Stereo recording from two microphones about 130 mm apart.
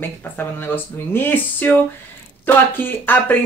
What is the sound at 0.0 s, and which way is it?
Speech, 15° left (ahead or behind).